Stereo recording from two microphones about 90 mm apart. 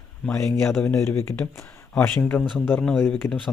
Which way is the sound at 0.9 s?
30° left (ahead or behind).